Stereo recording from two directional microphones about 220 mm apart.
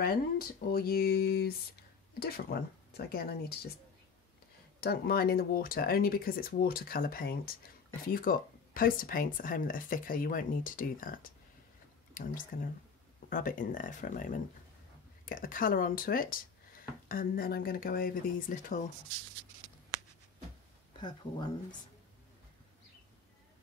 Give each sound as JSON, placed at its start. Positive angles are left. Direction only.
{"t": 0.0, "sound": "speech", "side_deg": 45}
{"t": 4.7, "sound": "speech", "side_deg": 45}
{"t": 21.0, "sound": "speech", "side_deg": 20}